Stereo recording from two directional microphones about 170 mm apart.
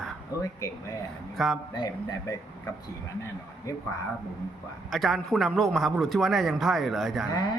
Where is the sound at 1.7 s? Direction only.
25° left (ahead or behind).